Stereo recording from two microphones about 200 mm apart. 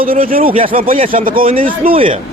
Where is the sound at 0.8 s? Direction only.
45° right (ahead or behind).